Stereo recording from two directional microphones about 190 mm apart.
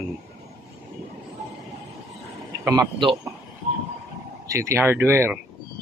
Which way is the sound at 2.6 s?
10° right (ahead or behind).